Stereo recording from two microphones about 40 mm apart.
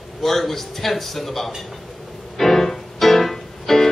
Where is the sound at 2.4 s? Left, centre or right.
Centre.